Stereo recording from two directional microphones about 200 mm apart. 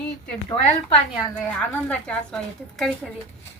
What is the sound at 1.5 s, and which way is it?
Speech, 5° left (ahead or behind).